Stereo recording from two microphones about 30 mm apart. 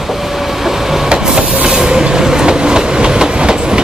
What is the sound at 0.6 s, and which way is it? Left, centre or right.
Vehicle, centre.